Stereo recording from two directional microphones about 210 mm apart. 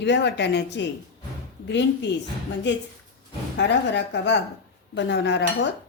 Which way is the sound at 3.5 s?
55° left (ahead or behind).